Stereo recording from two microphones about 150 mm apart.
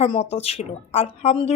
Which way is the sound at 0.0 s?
45° left (ahead or behind).